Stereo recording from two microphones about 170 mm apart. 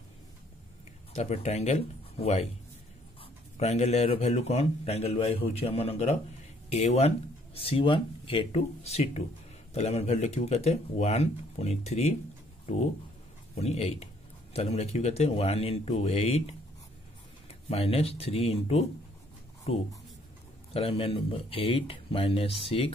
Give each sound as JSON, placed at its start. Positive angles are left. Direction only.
{"t": 1.1, "sound": "a man's voice", "side_deg": 40}
{"t": 3.5, "sound": "a man's voice", "side_deg": 40}